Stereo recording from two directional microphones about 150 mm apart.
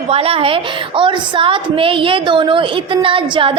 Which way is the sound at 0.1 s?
40° right (ahead or behind).